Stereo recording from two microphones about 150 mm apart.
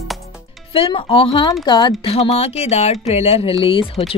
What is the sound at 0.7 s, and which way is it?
Speech, 35° left (ahead or behind).